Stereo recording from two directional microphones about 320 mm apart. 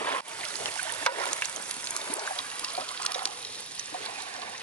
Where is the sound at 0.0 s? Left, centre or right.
Centre.